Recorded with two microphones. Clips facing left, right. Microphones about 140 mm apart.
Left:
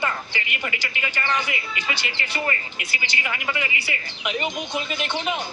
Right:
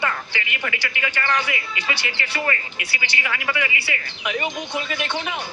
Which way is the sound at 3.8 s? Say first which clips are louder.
Right 1 dB; 20° left (ahead or behind).